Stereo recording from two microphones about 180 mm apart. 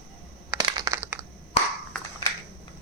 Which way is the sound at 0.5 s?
20° right (ahead or behind).